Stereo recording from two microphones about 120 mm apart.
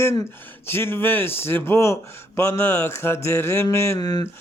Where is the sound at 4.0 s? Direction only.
35° left (ahead or behind).